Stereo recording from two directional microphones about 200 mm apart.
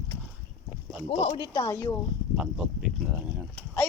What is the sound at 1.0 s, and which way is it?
Speech, 25° left (ahead or behind).